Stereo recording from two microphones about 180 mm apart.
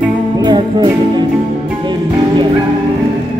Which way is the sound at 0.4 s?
25° right (ahead or behind).